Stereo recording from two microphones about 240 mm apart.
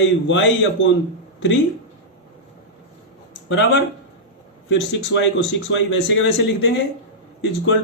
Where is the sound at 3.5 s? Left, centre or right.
Left.